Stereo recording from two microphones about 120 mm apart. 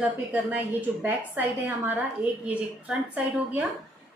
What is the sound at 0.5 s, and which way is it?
A woman's voice, 15° right (ahead or behind).